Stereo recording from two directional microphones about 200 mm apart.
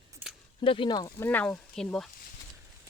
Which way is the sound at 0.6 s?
25° left (ahead or behind).